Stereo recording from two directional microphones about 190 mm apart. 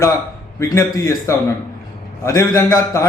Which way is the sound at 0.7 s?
15° left (ahead or behind).